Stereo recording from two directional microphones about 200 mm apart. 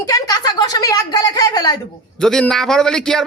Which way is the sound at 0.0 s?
15° left (ahead or behind).